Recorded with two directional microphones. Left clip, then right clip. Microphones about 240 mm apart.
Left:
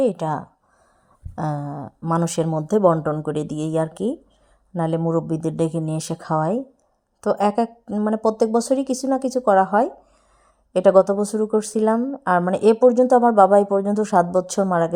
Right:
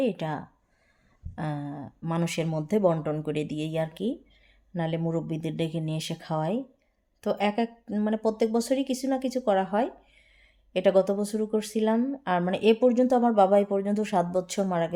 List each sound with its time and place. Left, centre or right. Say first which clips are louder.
0.0 s speech: left 8 dB; centre